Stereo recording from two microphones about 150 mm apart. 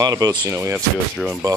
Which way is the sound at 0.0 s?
25° right (ahead or behind).